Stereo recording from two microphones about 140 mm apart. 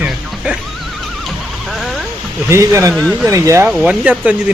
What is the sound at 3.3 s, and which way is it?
Speech, 25° right (ahead or behind).